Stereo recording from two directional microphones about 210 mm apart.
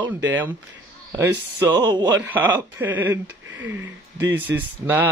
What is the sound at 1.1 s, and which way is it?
Speech, 15° right (ahead or behind).